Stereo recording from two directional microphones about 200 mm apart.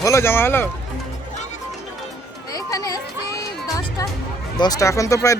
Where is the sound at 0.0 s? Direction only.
15° left (ahead or behind).